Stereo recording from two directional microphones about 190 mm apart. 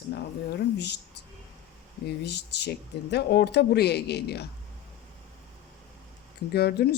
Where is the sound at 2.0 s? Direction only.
60° left (ahead or behind).